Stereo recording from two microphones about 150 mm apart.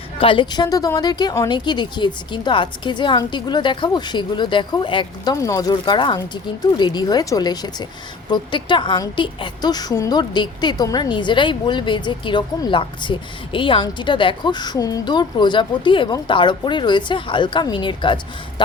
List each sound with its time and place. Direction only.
0.2 s a woman's voice: 35° left (ahead or behind)